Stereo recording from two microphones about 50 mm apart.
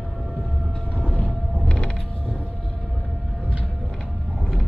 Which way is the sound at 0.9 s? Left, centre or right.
Left.